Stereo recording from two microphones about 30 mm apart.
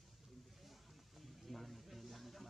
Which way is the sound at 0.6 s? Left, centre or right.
Centre.